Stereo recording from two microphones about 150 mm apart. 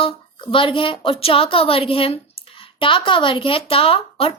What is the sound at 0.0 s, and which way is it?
A woman's voice, 35° left (ahead or behind).